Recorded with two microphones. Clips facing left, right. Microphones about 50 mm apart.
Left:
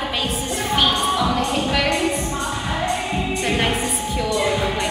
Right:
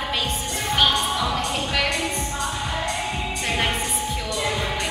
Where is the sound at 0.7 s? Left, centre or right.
Centre.